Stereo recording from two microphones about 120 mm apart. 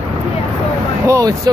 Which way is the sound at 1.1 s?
30° right (ahead or behind).